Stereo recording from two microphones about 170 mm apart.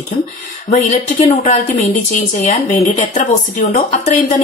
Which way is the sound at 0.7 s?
40° left (ahead or behind).